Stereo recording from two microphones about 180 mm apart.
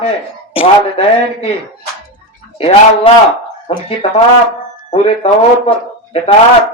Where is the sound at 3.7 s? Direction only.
35° left (ahead or behind).